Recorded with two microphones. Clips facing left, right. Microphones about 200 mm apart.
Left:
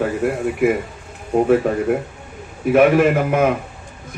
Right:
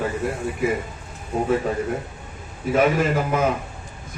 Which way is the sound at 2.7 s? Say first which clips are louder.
Left 6 dB; 60° left (ahead or behind).